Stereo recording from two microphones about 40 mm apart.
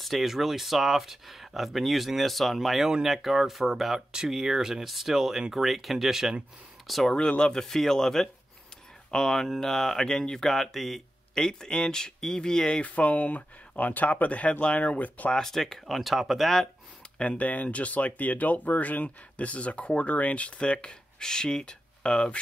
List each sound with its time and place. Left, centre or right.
0.0 s speech: centre
7.1 s speech: left; by 11.4 s centre
11.4 s speech: centre
12.8 s speech: left
14.8 s speech: left
15.3 s speech: centre
16.0 s speech: centre
17.2 s speech: left